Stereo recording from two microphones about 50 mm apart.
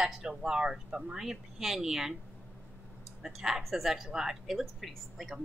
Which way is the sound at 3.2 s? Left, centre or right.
Centre.